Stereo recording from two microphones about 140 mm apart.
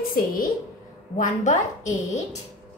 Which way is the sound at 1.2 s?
60° left (ahead or behind).